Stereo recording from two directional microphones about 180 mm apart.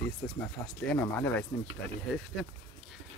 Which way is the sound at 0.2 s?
10° left (ahead or behind).